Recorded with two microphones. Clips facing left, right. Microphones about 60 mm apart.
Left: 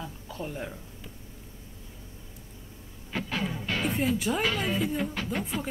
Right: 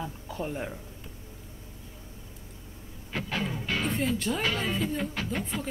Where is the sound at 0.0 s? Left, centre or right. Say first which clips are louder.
Right 3 dB; centre.